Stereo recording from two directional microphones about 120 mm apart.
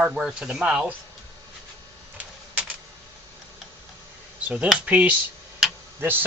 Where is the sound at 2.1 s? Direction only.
10° right (ahead or behind).